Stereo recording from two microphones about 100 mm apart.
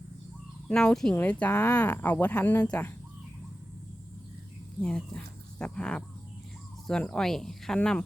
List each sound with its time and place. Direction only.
0.7 s speech: 5° left (ahead or behind)
4.8 s speech: 5° left (ahead or behind)